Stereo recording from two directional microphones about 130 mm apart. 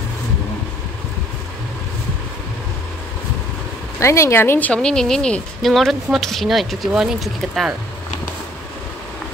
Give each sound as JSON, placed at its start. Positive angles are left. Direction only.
{"t": 4.0, "sound": "speech", "side_deg": 20}